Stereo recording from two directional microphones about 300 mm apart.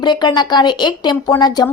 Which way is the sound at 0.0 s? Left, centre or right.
Centre.